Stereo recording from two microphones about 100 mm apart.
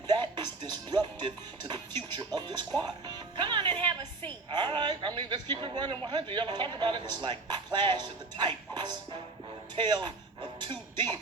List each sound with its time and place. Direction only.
0.1 s music: 45° right (ahead or behind)
4.5 s speech: 50° right (ahead or behind)
10.6 s music: 45° right (ahead or behind)